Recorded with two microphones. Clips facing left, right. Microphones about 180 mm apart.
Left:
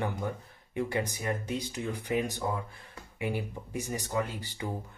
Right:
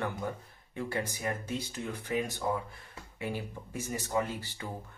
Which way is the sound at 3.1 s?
15° left (ahead or behind).